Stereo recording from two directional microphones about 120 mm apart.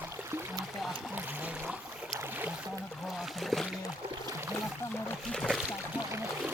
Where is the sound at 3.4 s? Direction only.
Centre (ahead or behind).